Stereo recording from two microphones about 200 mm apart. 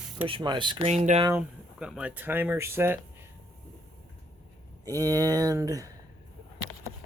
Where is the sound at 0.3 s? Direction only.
25° right (ahead or behind).